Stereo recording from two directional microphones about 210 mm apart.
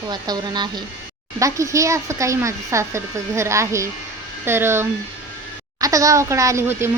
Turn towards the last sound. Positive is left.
turn(degrees=-15)  # may be behind; listen again after turning